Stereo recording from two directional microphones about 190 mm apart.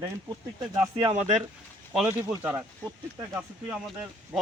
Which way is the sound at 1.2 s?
35° right (ahead or behind).